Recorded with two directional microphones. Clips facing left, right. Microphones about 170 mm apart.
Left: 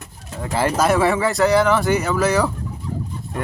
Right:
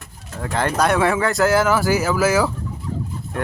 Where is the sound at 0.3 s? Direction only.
5° left (ahead or behind).